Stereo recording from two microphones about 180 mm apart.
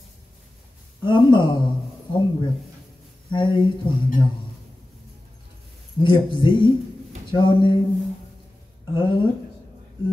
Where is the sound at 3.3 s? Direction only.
25° left (ahead or behind).